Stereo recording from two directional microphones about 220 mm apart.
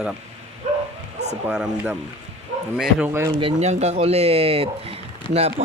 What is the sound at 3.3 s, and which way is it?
Speech, 30° right (ahead or behind).